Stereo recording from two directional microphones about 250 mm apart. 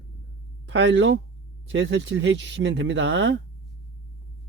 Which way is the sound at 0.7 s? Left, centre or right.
Right.